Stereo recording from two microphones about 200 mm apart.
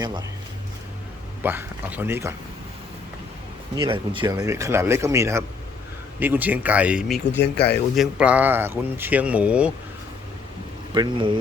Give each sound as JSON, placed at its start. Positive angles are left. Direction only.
{"t": 0.0, "sound": "speech", "side_deg": -20}
{"t": 1.4, "sound": "speech", "side_deg": -10}
{"t": 3.8, "sound": "speech", "side_deg": -25}
{"t": 7.4, "sound": "speech", "side_deg": 55}
{"t": 7.9, "sound": "speech", "side_deg": -5}
{"t": 10.9, "sound": "speech", "side_deg": -20}